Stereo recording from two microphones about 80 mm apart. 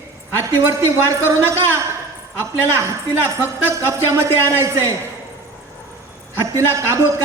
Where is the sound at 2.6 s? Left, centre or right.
Right.